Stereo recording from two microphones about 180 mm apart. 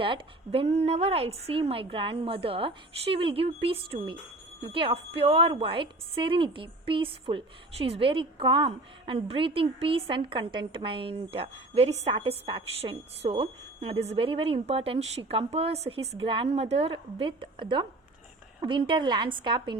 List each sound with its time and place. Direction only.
0.0 s a woman's voice: 30° right (ahead or behind)